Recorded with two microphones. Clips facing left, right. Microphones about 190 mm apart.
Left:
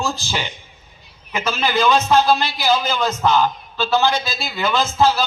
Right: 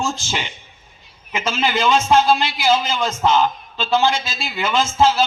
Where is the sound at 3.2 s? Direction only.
20° right (ahead or behind).